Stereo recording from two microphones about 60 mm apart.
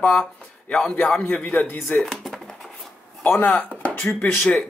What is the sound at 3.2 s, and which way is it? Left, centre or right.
Speech, left.